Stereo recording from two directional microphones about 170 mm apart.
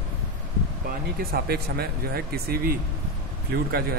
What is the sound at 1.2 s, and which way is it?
Speech, 60° right (ahead or behind).